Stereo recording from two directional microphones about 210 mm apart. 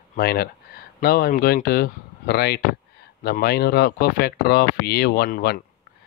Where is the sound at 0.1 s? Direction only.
45° left (ahead or behind).